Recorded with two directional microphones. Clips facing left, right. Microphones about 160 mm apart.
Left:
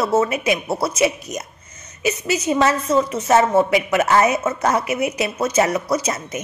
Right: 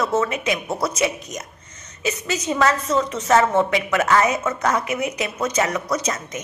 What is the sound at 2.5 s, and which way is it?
Speech, 25° left (ahead or behind).